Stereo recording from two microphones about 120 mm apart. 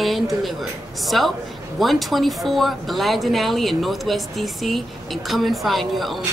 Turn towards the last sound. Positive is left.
turn(degrees=0)  # may be behind; listen again after turning